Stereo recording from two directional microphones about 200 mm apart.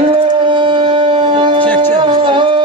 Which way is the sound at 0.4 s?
25° right (ahead or behind).